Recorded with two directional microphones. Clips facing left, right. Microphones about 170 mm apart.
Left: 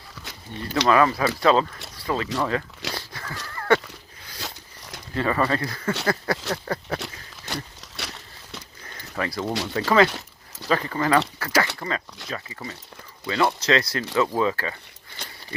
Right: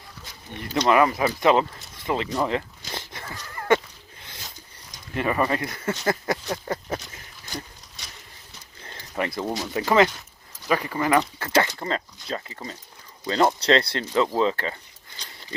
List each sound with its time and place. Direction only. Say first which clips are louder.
0.5 s speech: even; 20° right (ahead or behind)
2.9 s dog: left 1 dB; 20° right (ahead or behind)
3.5 s a sound: even; 20° right (ahead or behind)
4.4 s a sound: left 10 dB; 75° left (ahead or behind)
5.1 s speech: left 1 dB; 20° right (ahead or behind)
7.4 s horse: left 3 dB; 75° left (ahead or behind)
8.8 s a sound: right 1 dB; 25° right (ahead or behind)
9.7 s speech: even; 20° right (ahead or behind)
13.2 s speech: right 2 dB; 35° right (ahead or behind)